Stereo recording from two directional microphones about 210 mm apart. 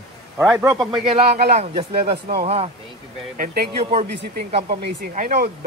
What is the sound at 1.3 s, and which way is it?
Speech, 50° right (ahead or behind).